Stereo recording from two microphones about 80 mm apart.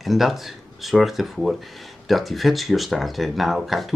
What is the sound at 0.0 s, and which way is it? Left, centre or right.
Speech, centre.